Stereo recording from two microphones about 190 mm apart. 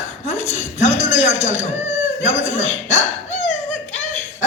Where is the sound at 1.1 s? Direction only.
35° left (ahead or behind).